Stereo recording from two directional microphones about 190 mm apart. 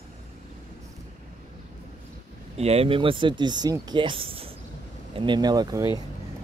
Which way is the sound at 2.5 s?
35° right (ahead or behind).